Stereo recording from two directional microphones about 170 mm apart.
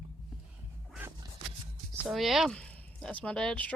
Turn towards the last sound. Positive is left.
turn(degrees=5)  # may be behind; listen again after turning